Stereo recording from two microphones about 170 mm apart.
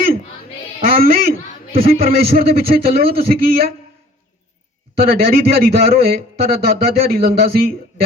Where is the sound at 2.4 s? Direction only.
60° right (ahead or behind).